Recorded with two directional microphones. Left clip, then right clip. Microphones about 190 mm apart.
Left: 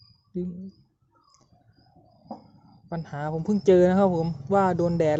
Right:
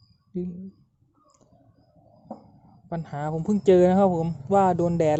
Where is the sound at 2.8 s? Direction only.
15° right (ahead or behind).